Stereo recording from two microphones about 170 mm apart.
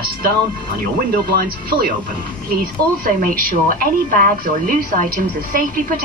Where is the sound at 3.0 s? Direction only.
55° right (ahead or behind).